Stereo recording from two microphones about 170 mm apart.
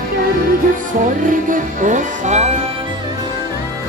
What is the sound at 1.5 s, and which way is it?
Music, 50° right (ahead or behind).